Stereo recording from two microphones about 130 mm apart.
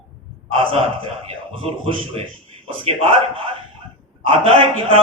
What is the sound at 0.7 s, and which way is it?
A man's voice, 45° right (ahead or behind).